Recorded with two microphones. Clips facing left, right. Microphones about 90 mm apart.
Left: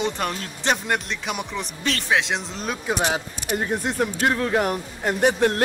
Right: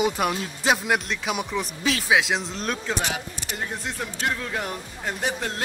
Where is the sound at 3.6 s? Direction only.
55° left (ahead or behind).